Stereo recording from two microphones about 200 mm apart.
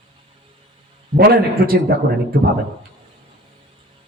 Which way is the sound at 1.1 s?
50° right (ahead or behind).